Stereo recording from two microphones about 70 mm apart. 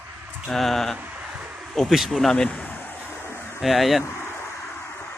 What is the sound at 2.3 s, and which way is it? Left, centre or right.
Speech, centre.